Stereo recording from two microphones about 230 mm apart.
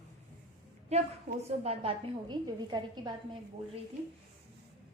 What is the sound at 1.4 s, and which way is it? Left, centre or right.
A woman's voice, right.